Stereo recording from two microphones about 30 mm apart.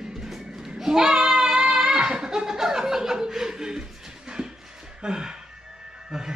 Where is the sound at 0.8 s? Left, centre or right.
Centre.